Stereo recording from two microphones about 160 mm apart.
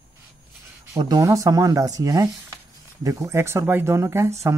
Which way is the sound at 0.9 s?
20° right (ahead or behind).